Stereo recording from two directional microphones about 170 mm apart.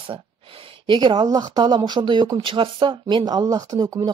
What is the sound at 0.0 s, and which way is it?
Speech, 30° right (ahead or behind).